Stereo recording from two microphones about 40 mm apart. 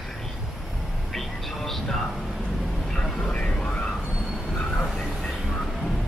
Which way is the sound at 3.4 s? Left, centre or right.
Left.